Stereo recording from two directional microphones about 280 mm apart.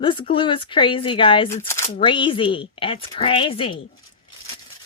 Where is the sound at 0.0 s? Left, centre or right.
Centre.